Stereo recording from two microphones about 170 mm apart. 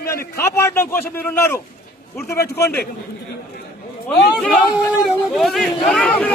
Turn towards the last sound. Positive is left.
turn(degrees=5)  # may be behind; listen again after turning